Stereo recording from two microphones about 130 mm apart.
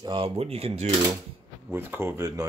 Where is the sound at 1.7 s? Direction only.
15° right (ahead or behind).